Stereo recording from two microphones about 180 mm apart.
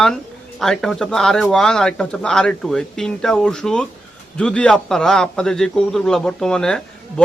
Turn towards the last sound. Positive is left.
turn(degrees=5)  # may be behind; listen again after turning